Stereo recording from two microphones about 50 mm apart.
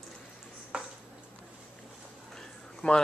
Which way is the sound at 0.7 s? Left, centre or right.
Centre.